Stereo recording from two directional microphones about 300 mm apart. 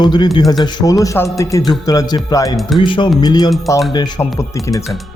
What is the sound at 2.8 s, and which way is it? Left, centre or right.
Speech, centre.